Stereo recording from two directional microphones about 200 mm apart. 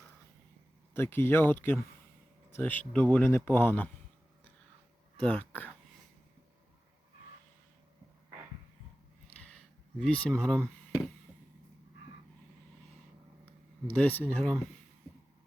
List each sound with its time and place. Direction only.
0.9 s speech: 10° left (ahead or behind)
5.2 s speech: 5° left (ahead or behind)
9.3 s a sound: 5° left (ahead or behind)
13.9 s speech: 10° left (ahead or behind)